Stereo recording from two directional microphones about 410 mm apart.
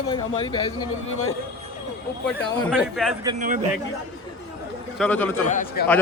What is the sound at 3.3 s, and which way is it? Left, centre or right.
Speech, centre.